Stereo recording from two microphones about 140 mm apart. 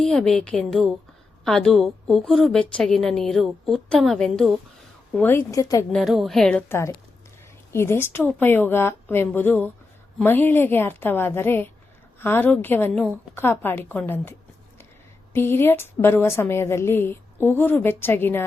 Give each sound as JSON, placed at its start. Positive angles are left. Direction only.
{"t": 0.0, "sound": "a woman's voice", "side_deg": 5}
{"t": 5.1, "sound": "a woman's voice", "side_deg": 15}
{"t": 5.9, "sound": "a woman's voice", "side_deg": 0}